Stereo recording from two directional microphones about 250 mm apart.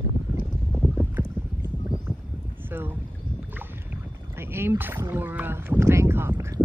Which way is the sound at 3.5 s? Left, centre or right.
Centre.